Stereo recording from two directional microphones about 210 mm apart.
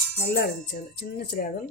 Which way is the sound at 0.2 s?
50° left (ahead or behind).